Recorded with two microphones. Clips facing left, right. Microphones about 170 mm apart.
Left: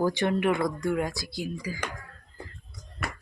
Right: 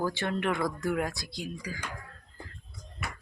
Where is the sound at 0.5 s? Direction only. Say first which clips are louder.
Left 3 dB; centre (ahead or behind).